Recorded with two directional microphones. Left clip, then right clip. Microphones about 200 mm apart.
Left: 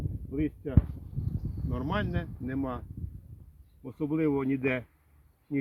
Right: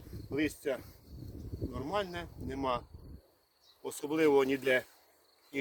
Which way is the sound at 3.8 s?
60° right (ahead or behind).